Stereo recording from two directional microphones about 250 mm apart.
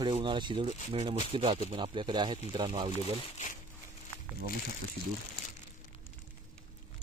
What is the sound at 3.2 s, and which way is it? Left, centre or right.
Speech, left.